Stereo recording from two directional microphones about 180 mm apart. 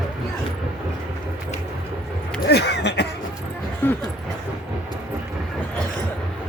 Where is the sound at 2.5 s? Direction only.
65° left (ahead or behind).